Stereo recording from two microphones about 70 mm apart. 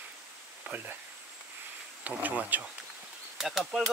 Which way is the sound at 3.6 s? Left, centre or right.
Centre.